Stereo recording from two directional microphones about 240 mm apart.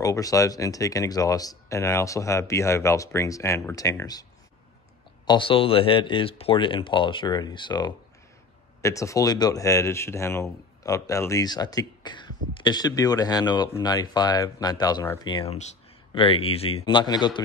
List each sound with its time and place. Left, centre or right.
0.0 s speech: centre